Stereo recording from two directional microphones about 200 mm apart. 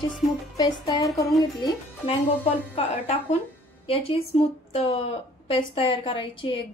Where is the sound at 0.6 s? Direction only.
20° left (ahead or behind).